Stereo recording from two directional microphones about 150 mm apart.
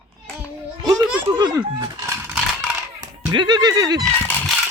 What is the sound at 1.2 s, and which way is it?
Speech, 25° right (ahead or behind).